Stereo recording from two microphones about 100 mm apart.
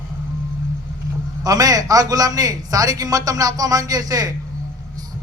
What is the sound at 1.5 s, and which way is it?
A man's voice, 40° right (ahead or behind).